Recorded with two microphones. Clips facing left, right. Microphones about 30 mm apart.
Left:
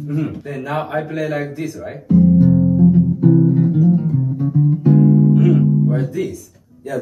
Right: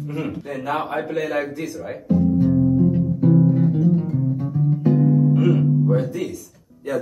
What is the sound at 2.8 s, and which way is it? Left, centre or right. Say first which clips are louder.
Music: left 5 dB; centre.